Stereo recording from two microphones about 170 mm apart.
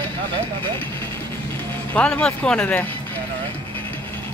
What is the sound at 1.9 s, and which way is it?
Speech, 5° left (ahead or behind).